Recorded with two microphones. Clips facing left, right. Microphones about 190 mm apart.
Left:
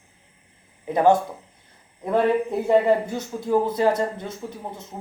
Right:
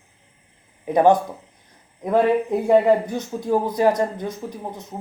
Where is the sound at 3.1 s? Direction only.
20° right (ahead or behind).